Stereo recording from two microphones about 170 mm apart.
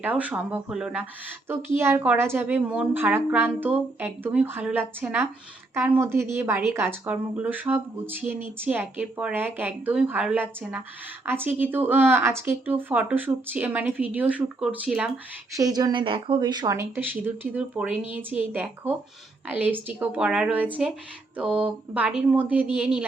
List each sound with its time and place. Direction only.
0.0 s speech: 10° right (ahead or behind)
15.5 s speech: 20° right (ahead or behind)
21.3 s a sound: 10° right (ahead or behind)
21.9 s speech: 5° right (ahead or behind)